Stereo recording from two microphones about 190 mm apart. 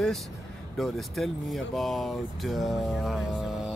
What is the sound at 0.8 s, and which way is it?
Speech, centre (ahead or behind).